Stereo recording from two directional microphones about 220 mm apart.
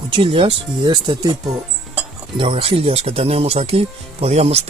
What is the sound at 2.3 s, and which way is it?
Speech, 25° right (ahead or behind).